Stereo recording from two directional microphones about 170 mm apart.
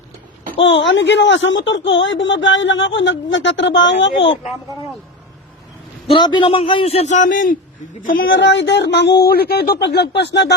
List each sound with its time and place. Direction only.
0.6 s a woman's voice: 90° left
6.1 s a man's voice: 30° left (ahead or behind); by 8.3 s 55° left (ahead or behind)
8.3 s a woman's voice: 90° left; by 9.7 s 65° left (ahead or behind)
9.8 s speech: 80° left
10.2 s speech: 90° left